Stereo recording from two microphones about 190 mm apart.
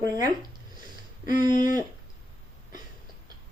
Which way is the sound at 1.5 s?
45° left (ahead or behind).